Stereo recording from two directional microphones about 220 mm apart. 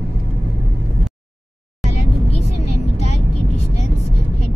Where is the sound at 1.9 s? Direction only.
90° left.